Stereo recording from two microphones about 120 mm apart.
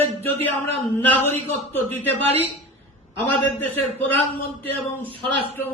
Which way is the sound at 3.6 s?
15° left (ahead or behind).